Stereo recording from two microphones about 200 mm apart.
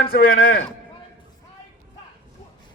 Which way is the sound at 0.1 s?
45° left (ahead or behind).